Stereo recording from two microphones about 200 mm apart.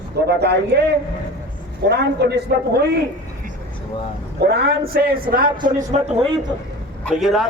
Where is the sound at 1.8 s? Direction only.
55° right (ahead or behind).